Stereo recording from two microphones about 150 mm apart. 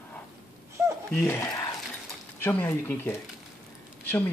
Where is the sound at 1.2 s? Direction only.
15° left (ahead or behind).